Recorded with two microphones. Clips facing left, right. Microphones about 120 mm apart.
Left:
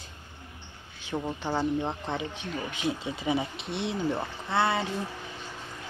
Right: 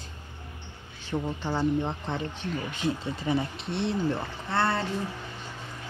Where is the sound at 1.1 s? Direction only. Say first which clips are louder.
Even; 5° left (ahead or behind).